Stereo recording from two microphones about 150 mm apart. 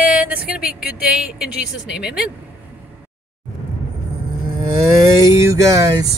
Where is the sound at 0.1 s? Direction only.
10° right (ahead or behind).